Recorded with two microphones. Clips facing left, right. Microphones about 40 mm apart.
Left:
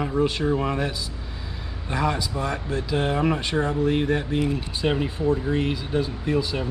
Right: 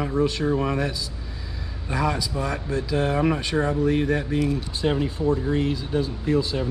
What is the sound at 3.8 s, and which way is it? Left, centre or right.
Speech, left.